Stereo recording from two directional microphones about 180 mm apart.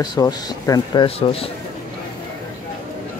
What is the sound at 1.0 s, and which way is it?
Speech, 30° left (ahead or behind).